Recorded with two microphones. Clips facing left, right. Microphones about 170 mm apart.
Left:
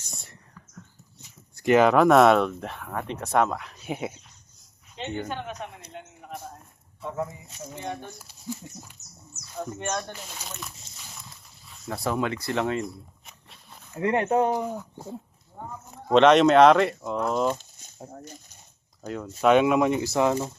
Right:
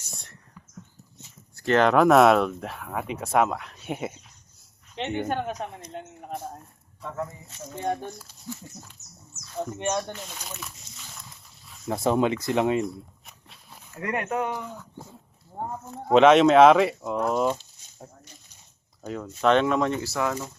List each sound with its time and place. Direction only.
0.0 s whispering: centre (ahead or behind)
1.5 s speech: 10° left (ahead or behind)
5.3 s speech: 40° right (ahead or behind)
7.0 s speech: 10° left (ahead or behind)
7.8 s speech: 45° right (ahead or behind)
8.2 s speech: 15° left (ahead or behind)
9.6 s speech: 20° right (ahead or behind)
10.1 s speech: 5° left (ahead or behind)
11.9 s speech: 25° right (ahead or behind)
12.8 s a sound: centre (ahead or behind)
13.9 s speech: 25° left (ahead or behind)
16.1 s speech: 5° right (ahead or behind)
18.1 s speech: 45° left (ahead or behind)
19.0 s speech: centre (ahead or behind); by 20.5 s 25° left (ahead or behind)